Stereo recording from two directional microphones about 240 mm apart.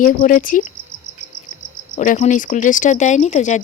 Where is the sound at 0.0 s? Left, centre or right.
Left.